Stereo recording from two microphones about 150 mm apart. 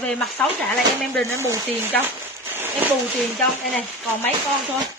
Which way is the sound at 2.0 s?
15° right (ahead or behind).